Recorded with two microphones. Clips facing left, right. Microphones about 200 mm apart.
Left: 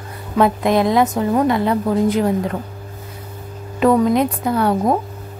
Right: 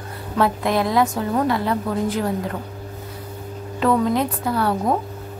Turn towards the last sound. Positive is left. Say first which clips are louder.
# left 4 dB
turn(degrees=20)  # may be behind; listen again after turning